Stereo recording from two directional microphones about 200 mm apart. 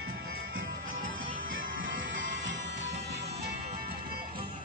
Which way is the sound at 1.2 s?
80° right.